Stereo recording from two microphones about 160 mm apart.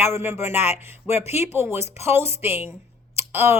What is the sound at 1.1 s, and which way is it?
Speech, 40° left (ahead or behind).